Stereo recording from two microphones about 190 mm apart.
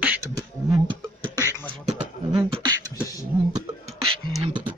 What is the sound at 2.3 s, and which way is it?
Beatboxing, 25° right (ahead or behind).